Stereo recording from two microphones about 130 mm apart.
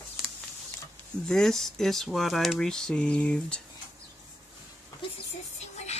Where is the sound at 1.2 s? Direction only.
5° left (ahead or behind).